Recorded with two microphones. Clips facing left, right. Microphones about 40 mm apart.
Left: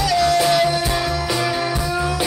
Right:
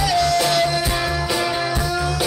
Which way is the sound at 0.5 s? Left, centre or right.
Centre.